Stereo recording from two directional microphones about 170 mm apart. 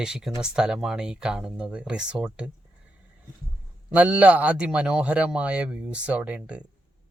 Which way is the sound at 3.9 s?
5° right (ahead or behind).